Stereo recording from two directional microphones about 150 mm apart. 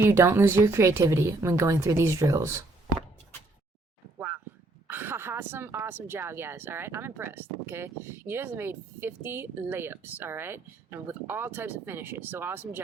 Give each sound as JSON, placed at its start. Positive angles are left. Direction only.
{"t": 0.0, "sound": "a woman's voice", "side_deg": -15}
{"t": 4.9, "sound": "a woman's voice", "side_deg": -15}